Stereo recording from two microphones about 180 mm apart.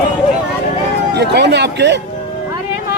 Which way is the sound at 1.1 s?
70° right (ahead or behind).